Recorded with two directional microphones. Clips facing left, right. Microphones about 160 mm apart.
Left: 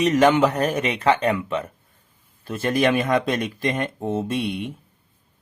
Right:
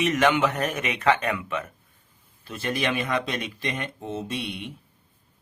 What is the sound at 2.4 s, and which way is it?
Speech, 50° left (ahead or behind).